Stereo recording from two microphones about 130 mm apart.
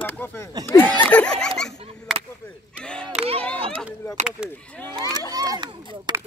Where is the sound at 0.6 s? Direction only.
30° right (ahead or behind).